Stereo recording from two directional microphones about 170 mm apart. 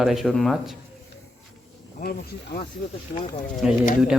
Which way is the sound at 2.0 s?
55° left (ahead or behind).